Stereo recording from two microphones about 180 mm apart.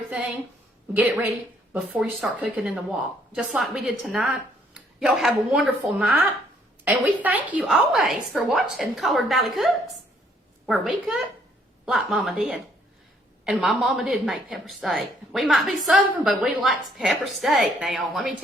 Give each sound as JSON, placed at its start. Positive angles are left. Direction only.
{"t": 0.9, "sound": "a woman's voice", "side_deg": -10}
{"t": 10.7, "sound": "a woman's voice", "side_deg": 0}